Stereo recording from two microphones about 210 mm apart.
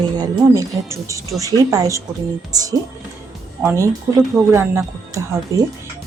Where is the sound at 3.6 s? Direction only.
15° right (ahead or behind).